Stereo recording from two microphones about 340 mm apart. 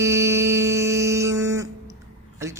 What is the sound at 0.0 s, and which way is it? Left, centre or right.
Music, centre.